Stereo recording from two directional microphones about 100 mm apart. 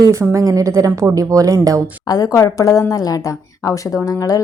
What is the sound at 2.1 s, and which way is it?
A woman's voice, 35° left (ahead or behind).